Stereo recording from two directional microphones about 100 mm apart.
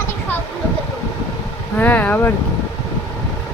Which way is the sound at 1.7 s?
15° left (ahead or behind).